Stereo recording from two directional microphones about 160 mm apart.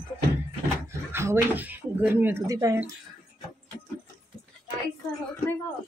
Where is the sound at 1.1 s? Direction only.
15° right (ahead or behind).